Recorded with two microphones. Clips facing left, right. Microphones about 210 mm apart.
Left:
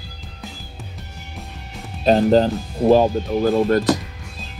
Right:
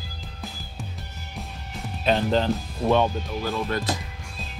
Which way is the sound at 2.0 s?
40° left (ahead or behind).